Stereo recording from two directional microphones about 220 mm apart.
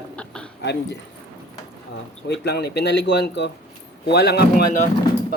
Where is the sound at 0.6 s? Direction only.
50° left (ahead or behind).